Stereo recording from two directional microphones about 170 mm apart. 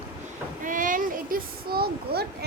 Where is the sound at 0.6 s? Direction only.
50° right (ahead or behind); by 2.4 s 70° right (ahead or behind).